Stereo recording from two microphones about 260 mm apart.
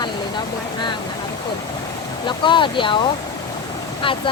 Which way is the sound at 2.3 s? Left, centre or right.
Centre.